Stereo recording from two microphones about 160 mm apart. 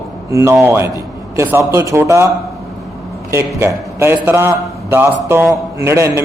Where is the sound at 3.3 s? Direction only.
15° right (ahead or behind).